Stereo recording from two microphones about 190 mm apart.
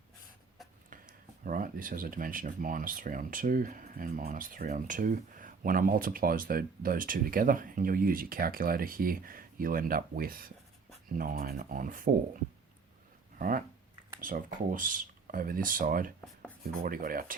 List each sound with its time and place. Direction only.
1.5 s speech: 45° right (ahead or behind)
14.2 s speech: 45° right (ahead or behind)